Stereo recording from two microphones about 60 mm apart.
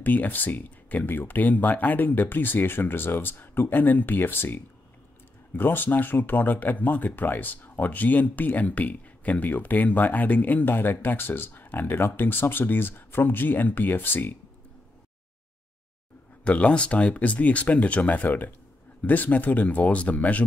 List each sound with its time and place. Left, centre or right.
0.0 s speech: left
16.4 s speech: left